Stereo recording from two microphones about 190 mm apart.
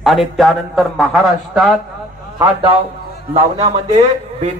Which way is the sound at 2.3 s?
30° right (ahead or behind).